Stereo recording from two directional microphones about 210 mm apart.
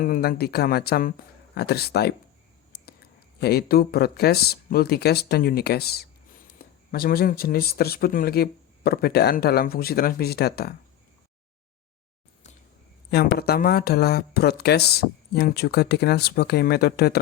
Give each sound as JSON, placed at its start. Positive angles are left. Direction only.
{"t": 0.0, "sound": "speech", "side_deg": 45}
{"t": 13.1, "sound": "speech", "side_deg": 50}